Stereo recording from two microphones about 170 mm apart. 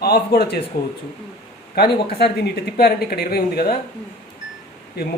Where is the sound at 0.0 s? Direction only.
65° left (ahead or behind).